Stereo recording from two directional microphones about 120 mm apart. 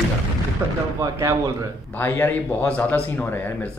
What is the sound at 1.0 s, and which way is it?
Speech, 25° right (ahead or behind).